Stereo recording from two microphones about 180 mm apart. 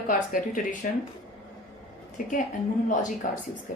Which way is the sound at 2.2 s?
45° left (ahead or behind).